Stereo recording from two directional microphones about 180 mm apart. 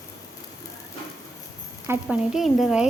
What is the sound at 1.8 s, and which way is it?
Speech, 5° right (ahead or behind).